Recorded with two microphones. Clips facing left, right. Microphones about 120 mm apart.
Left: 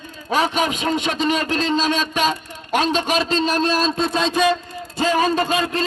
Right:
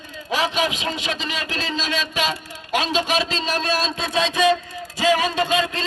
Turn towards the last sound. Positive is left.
turn(degrees=40)  # may be behind; listen again after turning